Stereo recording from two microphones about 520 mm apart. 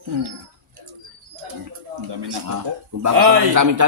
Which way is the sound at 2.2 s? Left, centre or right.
Right.